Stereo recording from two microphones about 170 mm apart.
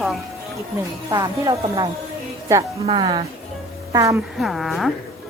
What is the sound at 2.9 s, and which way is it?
Speech, 30° right (ahead or behind).